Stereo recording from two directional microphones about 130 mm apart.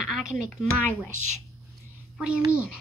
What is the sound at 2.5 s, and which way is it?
Speech, 10° right (ahead or behind).